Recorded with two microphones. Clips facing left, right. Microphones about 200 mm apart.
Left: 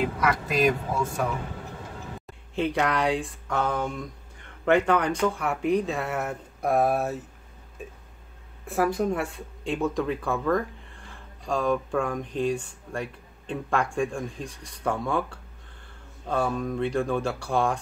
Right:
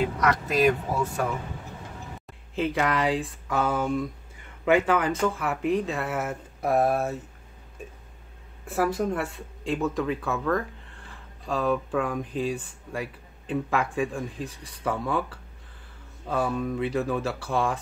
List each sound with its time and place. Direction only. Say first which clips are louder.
0.0 s speech: right 1 dB; centre (ahead or behind)
2.5 s speech: even; centre (ahead or behind)
7.8 s a sound: left 1 dB; centre (ahead or behind)
8.6 s speech: left 1 dB; centre (ahead or behind)